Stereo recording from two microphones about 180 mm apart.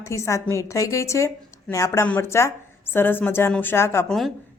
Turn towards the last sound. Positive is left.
turn(degrees=0)  # may be behind; listen again after turning